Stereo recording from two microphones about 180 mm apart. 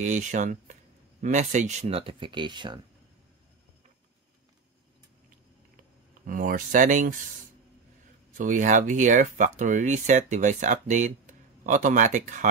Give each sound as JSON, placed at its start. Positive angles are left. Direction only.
{"t": 0.0, "sound": "speech", "side_deg": -45}
{"t": 6.2, "sound": "speech", "side_deg": -50}
{"t": 8.4, "sound": "speech", "side_deg": -45}